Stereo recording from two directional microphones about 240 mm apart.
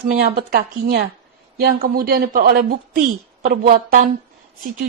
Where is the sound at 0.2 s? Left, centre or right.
Right.